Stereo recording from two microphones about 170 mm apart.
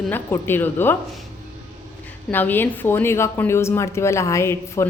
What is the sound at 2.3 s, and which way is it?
A woman's voice, 10° left (ahead or behind).